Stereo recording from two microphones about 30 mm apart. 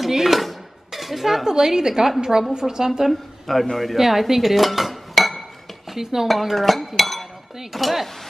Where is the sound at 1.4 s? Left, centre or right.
Centre.